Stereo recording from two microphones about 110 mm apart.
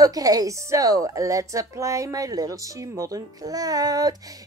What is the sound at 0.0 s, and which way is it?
A woman's voice, 35° right (ahead or behind).